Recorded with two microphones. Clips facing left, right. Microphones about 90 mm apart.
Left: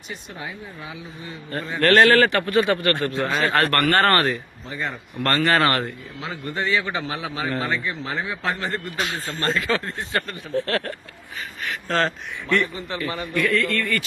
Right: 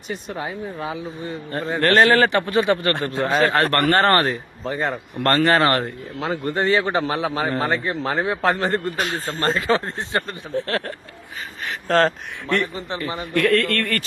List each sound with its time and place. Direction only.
0.1 s speech: 40° right (ahead or behind)
1.8 s a man's voice: 20° right (ahead or behind)
11.9 s speech: 40° right (ahead or behind)
12.7 s a man's voice: 25° right (ahead or behind)
13.3 s a man's voice: 65° right (ahead or behind)